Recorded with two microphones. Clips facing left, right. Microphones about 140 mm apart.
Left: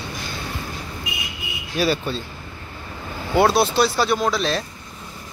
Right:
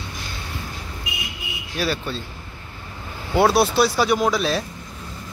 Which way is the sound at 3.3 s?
10° right (ahead or behind).